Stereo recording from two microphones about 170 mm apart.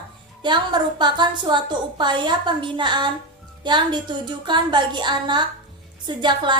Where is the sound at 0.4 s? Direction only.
25° right (ahead or behind).